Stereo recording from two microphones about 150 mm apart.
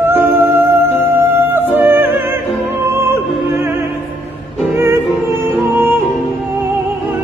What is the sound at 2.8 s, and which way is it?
Opera, 15° right (ahead or behind).